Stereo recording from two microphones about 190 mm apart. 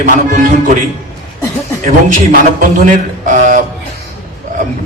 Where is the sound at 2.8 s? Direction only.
40° right (ahead or behind).